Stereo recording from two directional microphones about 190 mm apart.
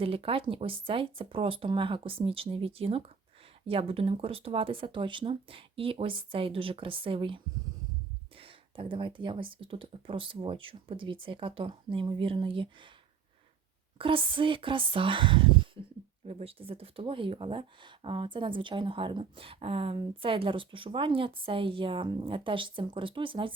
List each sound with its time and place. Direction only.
0.0 s speech: 30° right (ahead or behind)
14.0 s speech: 25° right (ahead or behind)